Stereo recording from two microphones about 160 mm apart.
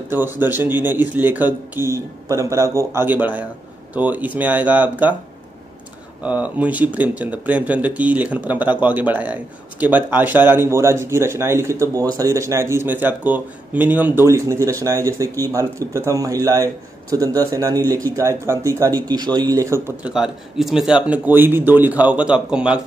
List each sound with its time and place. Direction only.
0.1 s speech: 15° right (ahead or behind)
6.2 s speech: 10° right (ahead or behind)
20.0 s speech: 5° right (ahead or behind)